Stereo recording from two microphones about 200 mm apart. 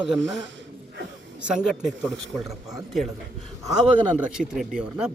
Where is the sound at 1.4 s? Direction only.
5° right (ahead or behind).